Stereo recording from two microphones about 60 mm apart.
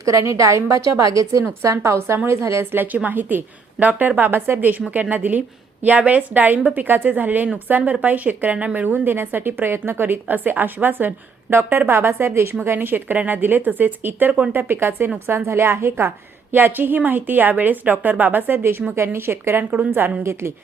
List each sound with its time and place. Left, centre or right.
0.0 s a woman's voice: right
2.7 s a woman's voice: right
11.9 s a woman's voice: right